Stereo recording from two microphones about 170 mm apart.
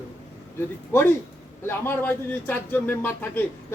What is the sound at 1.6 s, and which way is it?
Speech, 10° left (ahead or behind).